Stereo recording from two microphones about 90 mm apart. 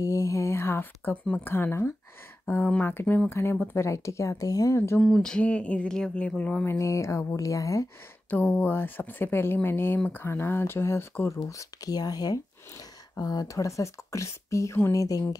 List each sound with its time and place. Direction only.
0.0 s a sound: 35° left (ahead or behind)
1.4 s speech: 25° left (ahead or behind)
5.0 s speech: 10° left (ahead or behind)
6.7 s speech: 35° left (ahead or behind)
8.3 s speech: 20° left (ahead or behind)
11.4 s speech: 40° left (ahead or behind)